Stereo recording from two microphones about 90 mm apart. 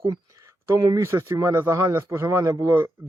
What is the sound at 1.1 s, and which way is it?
A man's voice, 30° right (ahead or behind).